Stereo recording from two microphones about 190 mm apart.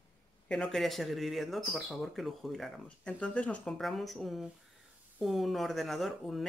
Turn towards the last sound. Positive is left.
turn(degrees=0)  # may be behind; listen again after turning